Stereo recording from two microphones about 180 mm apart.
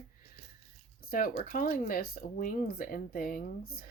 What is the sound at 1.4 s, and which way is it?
Speech, 50° left (ahead or behind).